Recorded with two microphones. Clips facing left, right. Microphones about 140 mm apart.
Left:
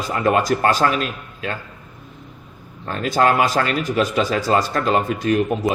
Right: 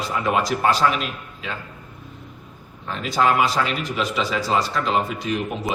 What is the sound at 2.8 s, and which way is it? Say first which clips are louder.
A man's voice: left 3 dB; 50° left (ahead or behind).